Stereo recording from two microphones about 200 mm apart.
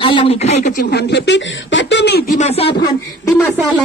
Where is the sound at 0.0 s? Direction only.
25° left (ahead or behind).